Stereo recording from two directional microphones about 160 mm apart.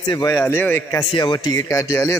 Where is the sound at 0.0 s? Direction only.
25° left (ahead or behind).